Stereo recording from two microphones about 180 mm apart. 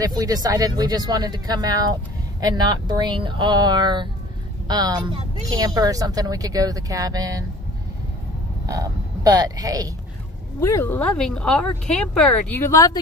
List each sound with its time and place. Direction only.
0.2 s speech: 20° right (ahead or behind)
8.6 s speech: 20° right (ahead or behind)
10.6 s speech: 15° left (ahead or behind)